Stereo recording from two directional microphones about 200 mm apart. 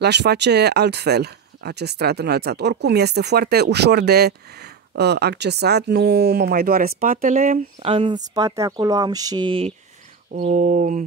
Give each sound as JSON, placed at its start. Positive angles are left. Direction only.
{"t": 0.0, "sound": "speech", "side_deg": -55}
{"t": 7.8, "sound": "speech", "side_deg": -25}
{"t": 10.4, "sound": "a sound", "side_deg": -40}